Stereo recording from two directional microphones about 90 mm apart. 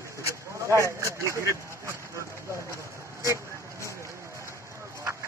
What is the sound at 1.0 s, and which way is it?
Speech, 35° right (ahead or behind).